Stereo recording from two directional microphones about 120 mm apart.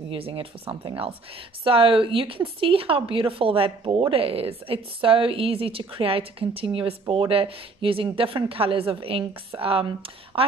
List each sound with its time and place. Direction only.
0.1 s speech: 50° right (ahead or behind)